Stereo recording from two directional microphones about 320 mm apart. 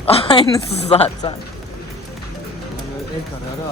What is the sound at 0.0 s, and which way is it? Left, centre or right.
Speech, centre.